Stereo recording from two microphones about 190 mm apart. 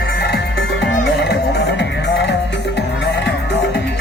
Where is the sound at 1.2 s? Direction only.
65° left (ahead or behind).